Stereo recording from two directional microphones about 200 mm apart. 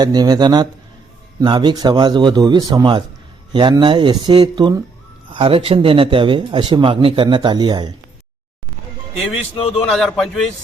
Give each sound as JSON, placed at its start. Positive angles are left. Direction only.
{"t": 0.0, "sound": "a man's voice", "side_deg": -20}
{"t": 9.4, "sound": "speech", "side_deg": 30}
{"t": 9.9, "sound": "a man's voice", "side_deg": 0}